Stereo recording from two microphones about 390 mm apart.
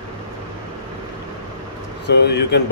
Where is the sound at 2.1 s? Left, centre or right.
Left.